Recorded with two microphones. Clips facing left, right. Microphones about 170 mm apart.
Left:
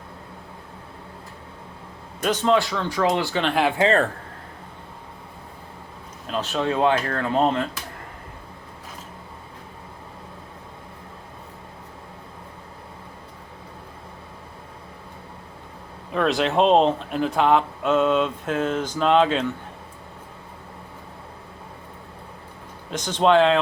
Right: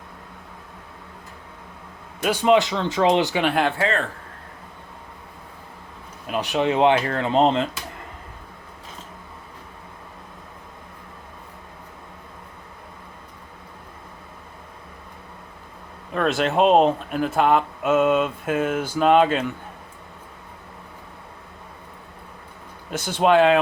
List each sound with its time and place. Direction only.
2.2 s speech: 10° right (ahead or behind)
3.4 s speech: centre (ahead or behind)
6.2 s speech: 15° right (ahead or behind)
16.1 s speech: centre (ahead or behind)
22.9 s speech: 10° right (ahead or behind)